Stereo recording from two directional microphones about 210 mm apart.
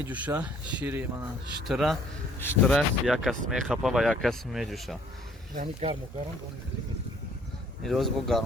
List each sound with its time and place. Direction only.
0.1 s speech: 10° right (ahead or behind)
5.5 s speech: 30° right (ahead or behind)
7.9 s speech: centre (ahead or behind)